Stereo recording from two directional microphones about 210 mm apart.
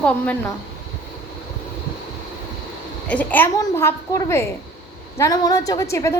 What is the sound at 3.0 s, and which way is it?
A woman's voice, 5° left (ahead or behind).